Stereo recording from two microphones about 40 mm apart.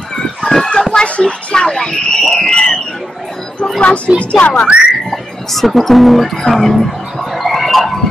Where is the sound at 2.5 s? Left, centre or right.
Centre.